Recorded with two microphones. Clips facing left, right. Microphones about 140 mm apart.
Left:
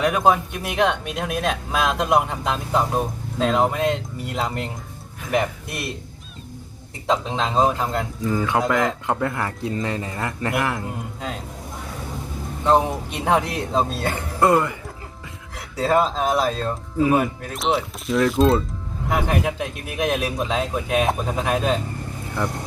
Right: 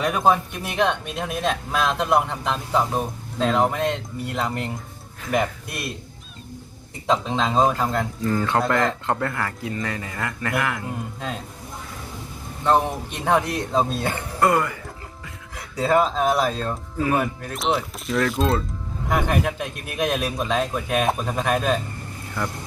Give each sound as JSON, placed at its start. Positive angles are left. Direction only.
{"t": 0.0, "sound": "a man's voice", "side_deg": 5}
{"t": 7.1, "sound": "a man's voice", "side_deg": 0}
{"t": 9.3, "sound": "speech", "side_deg": 20}
{"t": 12.6, "sound": "a man's voice", "side_deg": 10}
{"t": 14.2, "sound": "speech", "side_deg": 15}
{"t": 15.7, "sound": "a man's voice", "side_deg": 0}
{"t": 17.0, "sound": "speech", "side_deg": 15}
{"t": 17.5, "sound": "a man's voice", "side_deg": 0}